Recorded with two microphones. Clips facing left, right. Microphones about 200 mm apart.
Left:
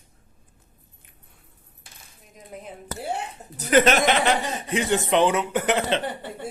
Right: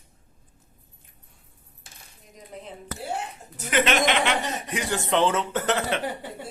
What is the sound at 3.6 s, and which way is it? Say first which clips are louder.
Speech: left 5 dB; 40° left (ahead or behind).